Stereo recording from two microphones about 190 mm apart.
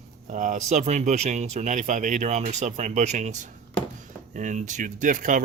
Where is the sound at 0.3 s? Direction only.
40° right (ahead or behind).